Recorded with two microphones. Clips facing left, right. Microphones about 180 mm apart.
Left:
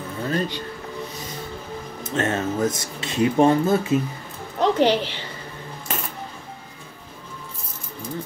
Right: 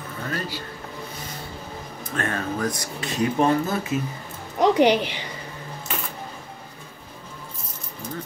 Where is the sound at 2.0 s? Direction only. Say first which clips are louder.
Left 4 dB; 25° left (ahead or behind).